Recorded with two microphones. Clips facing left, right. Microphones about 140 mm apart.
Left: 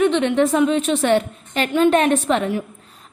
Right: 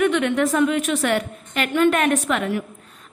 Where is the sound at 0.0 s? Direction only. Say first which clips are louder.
Left 3 dB; 25° left (ahead or behind).